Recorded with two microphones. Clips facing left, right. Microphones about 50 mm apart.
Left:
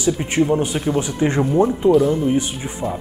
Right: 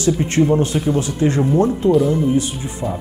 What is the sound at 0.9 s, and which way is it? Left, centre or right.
Speech, left.